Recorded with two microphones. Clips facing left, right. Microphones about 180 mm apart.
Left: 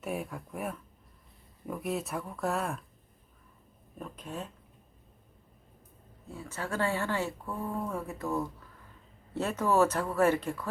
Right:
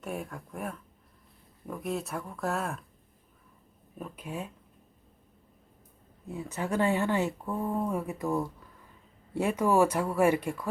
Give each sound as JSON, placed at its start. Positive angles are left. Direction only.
{"t": 0.0, "sound": "speech", "side_deg": 5}
{"t": 3.9, "sound": "speech", "side_deg": -5}
{"t": 6.3, "sound": "speech", "side_deg": -20}